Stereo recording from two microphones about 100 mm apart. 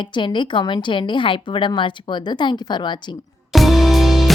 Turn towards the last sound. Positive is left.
turn(degrees=0)  # may be behind; listen again after turning